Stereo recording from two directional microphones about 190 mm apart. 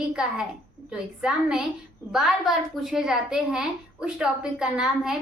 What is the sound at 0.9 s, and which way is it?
A woman's voice, 5° right (ahead or behind).